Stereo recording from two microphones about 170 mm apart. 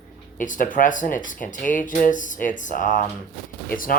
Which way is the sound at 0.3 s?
50° left (ahead or behind).